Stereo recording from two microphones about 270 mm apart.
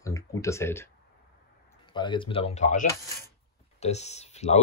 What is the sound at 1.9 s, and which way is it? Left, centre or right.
Speech, centre.